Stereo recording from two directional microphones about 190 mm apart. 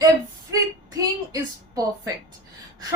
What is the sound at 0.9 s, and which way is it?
Speech, 20° right (ahead or behind).